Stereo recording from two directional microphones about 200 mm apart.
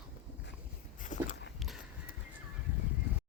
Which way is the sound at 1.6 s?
Centre (ahead or behind).